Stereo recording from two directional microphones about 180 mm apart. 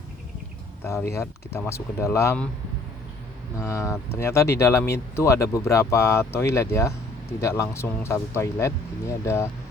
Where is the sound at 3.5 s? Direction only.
15° left (ahead or behind).